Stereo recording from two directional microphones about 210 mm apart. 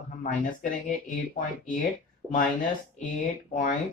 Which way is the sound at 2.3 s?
40° left (ahead or behind).